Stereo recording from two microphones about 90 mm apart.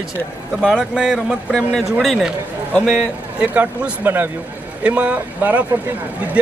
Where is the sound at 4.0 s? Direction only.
25° right (ahead or behind).